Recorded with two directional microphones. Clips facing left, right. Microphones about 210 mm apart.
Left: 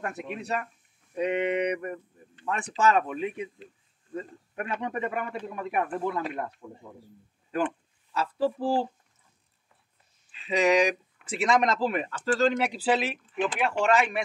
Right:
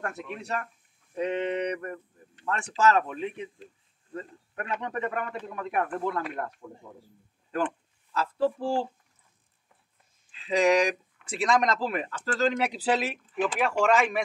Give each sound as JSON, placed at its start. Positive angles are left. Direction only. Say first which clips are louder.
{"t": 0.3, "sound": "a man's voice", "louder": "left 2 dB", "side_deg": 10}
{"t": 6.1, "sound": "speech", "louder": "left 1 dB", "side_deg": 20}
{"t": 10.4, "sound": "speech", "louder": "even", "side_deg": 0}